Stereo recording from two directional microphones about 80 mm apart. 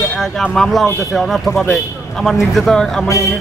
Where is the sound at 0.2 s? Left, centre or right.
Centre.